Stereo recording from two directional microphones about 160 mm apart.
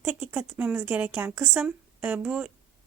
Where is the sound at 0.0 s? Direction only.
15° right (ahead or behind).